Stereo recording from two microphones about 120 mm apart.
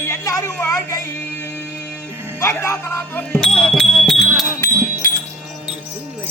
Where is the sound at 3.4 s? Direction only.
5° left (ahead or behind).